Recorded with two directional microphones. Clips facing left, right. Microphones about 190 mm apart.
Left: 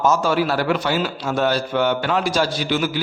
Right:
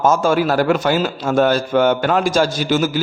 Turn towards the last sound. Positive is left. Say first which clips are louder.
# right 4 dB
turn(degrees=-45)  # may be behind; listen again after turning